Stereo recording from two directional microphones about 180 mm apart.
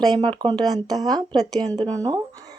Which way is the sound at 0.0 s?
25° right (ahead or behind).